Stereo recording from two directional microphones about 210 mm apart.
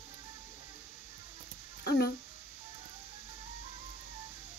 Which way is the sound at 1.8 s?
50° left (ahead or behind).